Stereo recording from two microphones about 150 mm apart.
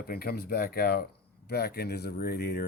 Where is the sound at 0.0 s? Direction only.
90° left.